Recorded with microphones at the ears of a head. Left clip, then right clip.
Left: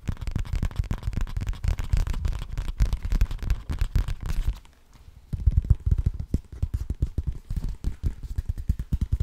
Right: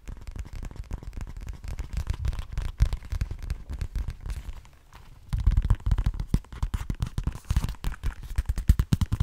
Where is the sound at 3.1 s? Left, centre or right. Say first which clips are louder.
Left 5 dB; left.